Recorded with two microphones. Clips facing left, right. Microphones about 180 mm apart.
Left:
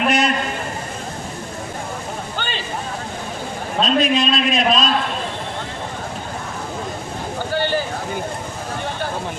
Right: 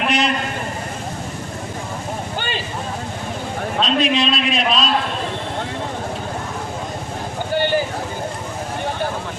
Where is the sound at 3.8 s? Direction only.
45° left (ahead or behind).